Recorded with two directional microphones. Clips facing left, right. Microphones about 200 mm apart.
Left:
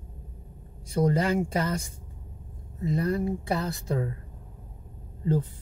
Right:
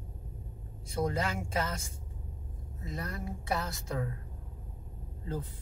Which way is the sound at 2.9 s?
30° left (ahead or behind).